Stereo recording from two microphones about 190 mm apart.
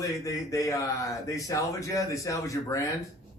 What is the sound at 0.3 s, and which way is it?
A man's voice, 15° left (ahead or behind).